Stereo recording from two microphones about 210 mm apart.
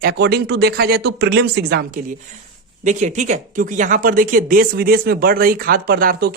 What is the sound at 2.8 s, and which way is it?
Speech, 35° right (ahead or behind).